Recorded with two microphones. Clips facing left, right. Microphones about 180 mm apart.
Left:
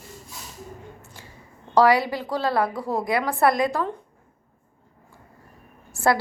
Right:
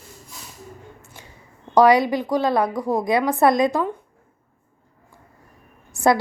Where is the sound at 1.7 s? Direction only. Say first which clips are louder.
Right 3 dB; 15° right (ahead or behind).